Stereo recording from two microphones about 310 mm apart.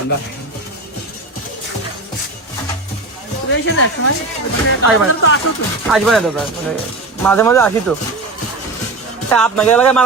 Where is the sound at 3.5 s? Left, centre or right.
Left.